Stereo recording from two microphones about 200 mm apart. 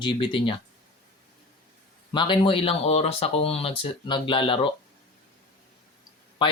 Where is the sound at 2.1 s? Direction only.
25° left (ahead or behind).